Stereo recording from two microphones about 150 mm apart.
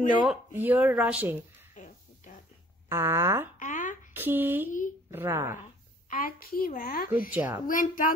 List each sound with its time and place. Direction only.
0.7 s speech: 10° right (ahead or behind)
1.8 s a sound: 60° left (ahead or behind)
2.9 s speech: 15° right (ahead or behind)
3.5 s a sound: 60° left (ahead or behind)
4.1 s speech: 15° right (ahead or behind)
4.6 s a woman's voice: 60° left (ahead or behind)
5.1 s speech: 15° right (ahead or behind)
6.0 s a woman's voice: 70° left (ahead or behind)
7.1 s speech: 10° right (ahead or behind)
7.6 s a woman's voice: 65° left (ahead or behind)